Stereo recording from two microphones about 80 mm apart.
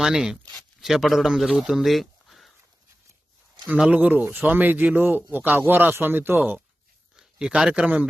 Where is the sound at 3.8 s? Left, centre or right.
Centre.